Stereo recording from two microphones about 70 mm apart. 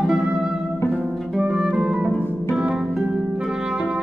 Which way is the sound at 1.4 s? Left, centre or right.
Centre.